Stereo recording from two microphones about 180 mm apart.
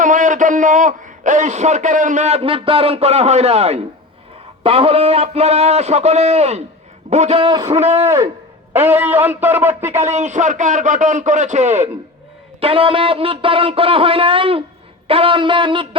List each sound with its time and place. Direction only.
0.0 s a man's voice: 45° right (ahead or behind); by 7.8 s 25° right (ahead or behind)
7.8 s a man's voice: 35° right (ahead or behind)
8.0 s speech: 15° right (ahead or behind)
10.0 s a man's voice: 40° right (ahead or behind)
15.0 s a sound: 30° right (ahead or behind)